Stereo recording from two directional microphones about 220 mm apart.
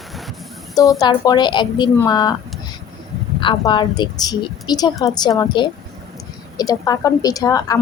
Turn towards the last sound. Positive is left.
turn(degrees=15)  # may be behind; listen again after turning